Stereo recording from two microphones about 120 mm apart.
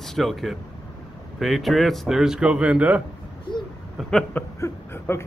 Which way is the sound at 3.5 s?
40° left (ahead or behind).